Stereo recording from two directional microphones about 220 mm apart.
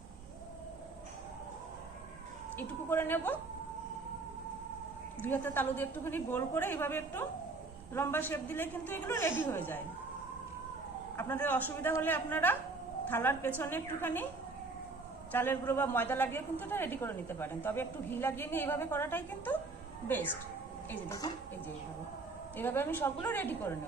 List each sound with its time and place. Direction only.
2.6 s a woman's voice: 10° left (ahead or behind)
5.2 s a woman's voice: 10° left (ahead or behind)
11.2 s a woman's voice: 10° left (ahead or behind)
15.3 s a woman's voice: 10° left (ahead or behind)
22.5 s a woman's voice: 10° left (ahead or behind)